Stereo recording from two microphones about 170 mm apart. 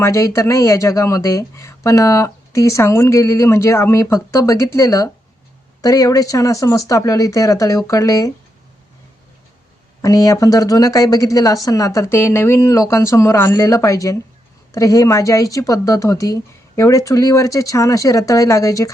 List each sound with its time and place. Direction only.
0.0 s speech: 15° left (ahead or behind)
10.0 s speech: 20° left (ahead or behind)